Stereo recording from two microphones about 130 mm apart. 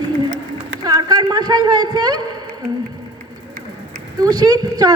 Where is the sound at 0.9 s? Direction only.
30° right (ahead or behind).